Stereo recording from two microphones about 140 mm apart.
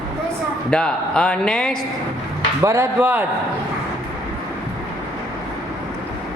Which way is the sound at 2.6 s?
20° right (ahead or behind).